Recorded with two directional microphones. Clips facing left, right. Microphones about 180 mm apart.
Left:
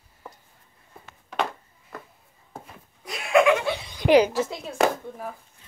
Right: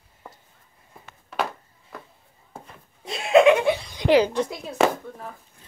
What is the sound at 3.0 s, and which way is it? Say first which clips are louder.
Laughter: right 4 dB; 25° right (ahead or behind).